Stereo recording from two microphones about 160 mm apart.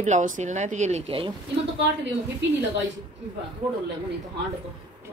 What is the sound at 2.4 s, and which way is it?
Speech, 90° right.